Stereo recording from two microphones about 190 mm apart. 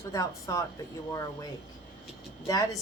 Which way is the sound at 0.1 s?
15° left (ahead or behind).